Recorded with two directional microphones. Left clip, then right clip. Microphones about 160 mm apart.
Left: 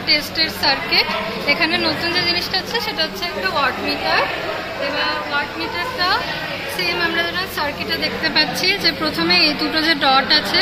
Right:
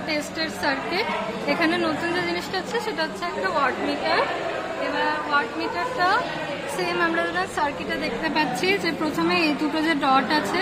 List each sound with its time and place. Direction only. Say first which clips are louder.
0.1 s a woman's voice: left 10 dB; 55° right (ahead or behind)
6.8 s speech: left 4 dB; 80° right
8.0 s a woman's voice: left 6 dB; 60° right (ahead or behind)